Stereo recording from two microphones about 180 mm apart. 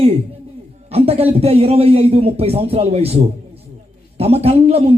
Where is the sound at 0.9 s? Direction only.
35° right (ahead or behind).